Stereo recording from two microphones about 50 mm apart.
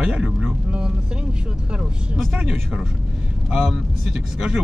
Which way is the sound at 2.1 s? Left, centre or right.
Right.